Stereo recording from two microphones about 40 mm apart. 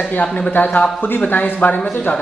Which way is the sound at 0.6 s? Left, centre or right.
Left.